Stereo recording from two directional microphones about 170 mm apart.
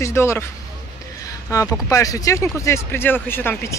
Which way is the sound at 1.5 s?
20° left (ahead or behind).